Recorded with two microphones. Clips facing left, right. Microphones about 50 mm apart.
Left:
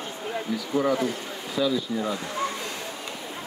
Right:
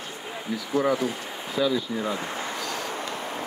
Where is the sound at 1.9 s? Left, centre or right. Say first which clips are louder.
Even; right.